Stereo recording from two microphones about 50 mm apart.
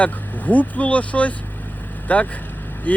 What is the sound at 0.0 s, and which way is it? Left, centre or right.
Speech, left.